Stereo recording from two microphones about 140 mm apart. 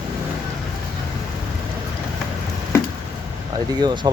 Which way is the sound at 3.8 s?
35° right (ahead or behind).